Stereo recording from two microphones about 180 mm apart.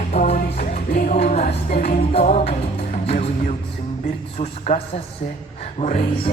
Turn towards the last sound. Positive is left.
turn(degrees=35)  # may be behind; listen again after turning